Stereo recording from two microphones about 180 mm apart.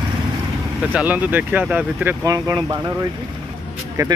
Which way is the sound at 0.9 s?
10° right (ahead or behind).